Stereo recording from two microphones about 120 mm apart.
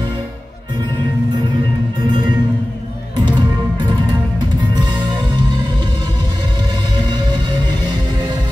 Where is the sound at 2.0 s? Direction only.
40° right (ahead or behind).